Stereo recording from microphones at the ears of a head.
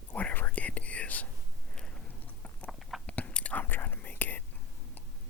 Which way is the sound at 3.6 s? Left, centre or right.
Left.